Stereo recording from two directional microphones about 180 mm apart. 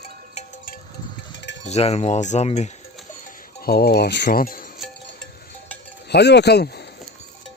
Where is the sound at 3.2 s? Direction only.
55° left (ahead or behind).